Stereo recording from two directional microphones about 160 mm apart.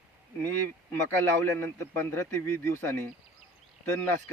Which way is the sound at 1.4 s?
15° left (ahead or behind).